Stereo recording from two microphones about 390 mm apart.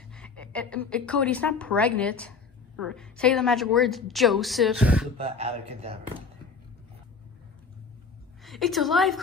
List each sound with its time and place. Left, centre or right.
0.1 s a woman's voice: centre
5.1 s speech: centre
8.5 s a woman's voice: centre